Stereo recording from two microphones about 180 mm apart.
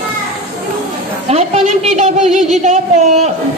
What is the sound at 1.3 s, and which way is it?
A woman's voice, 35° right (ahead or behind).